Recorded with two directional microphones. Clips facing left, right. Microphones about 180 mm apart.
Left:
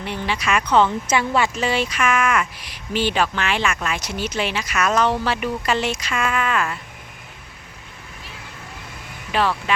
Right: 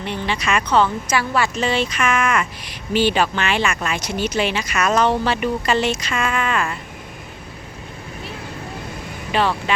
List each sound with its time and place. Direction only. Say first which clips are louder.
0.0 s speech: right 1 dB; 5° left (ahead or behind)
1.0 s speech: even; 25° left (ahead or behind)
1.5 s speech: right 1 dB; 10° left (ahead or behind)
9.3 s speech: right 1 dB; centre (ahead or behind)